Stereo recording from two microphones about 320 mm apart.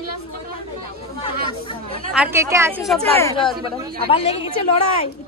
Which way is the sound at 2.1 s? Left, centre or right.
Centre.